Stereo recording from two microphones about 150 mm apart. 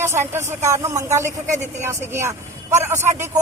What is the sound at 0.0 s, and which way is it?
A man's voice, 15° right (ahead or behind).